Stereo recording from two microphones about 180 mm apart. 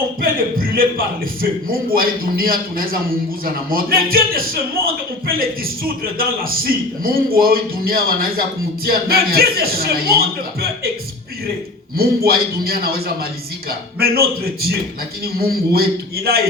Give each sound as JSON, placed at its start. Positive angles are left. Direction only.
{"t": 0.2, "sound": "a man's voice", "side_deg": -55}
{"t": 11.9, "sound": "a man's voice", "side_deg": -60}